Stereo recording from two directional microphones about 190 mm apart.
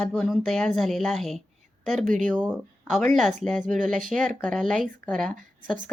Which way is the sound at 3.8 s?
40° right (ahead or behind).